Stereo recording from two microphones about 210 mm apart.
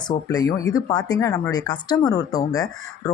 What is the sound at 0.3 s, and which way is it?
Speech, 15° left (ahead or behind).